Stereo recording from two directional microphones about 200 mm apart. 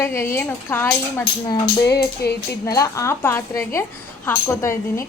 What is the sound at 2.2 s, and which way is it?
Speech, 50° left (ahead or behind).